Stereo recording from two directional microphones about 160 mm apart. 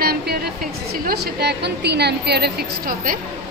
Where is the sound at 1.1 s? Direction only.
85° right.